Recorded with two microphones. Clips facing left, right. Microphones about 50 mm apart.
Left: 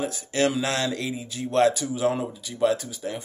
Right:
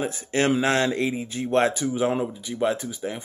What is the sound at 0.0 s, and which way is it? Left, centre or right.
Speech, right.